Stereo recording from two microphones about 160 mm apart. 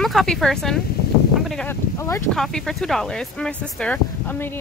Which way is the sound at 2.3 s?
Centre (ahead or behind).